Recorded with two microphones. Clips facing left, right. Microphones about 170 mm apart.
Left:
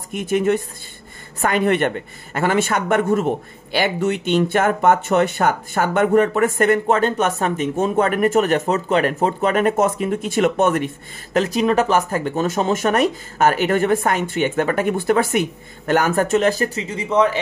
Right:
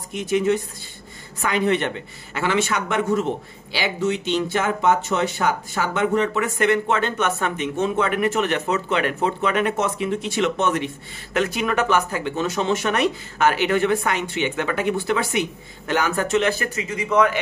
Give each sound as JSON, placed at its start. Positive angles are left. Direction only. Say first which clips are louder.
{"t": 0.1, "sound": "speech", "louder": "left 2 dB", "side_deg": 55}
{"t": 11.3, "sound": "a man's voice", "louder": "left 5 dB", "side_deg": 35}